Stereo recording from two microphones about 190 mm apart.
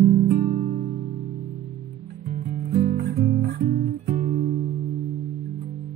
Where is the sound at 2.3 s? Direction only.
50° right (ahead or behind).